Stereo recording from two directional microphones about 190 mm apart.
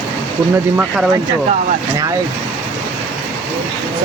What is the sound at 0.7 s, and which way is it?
Speech, centre (ahead or behind).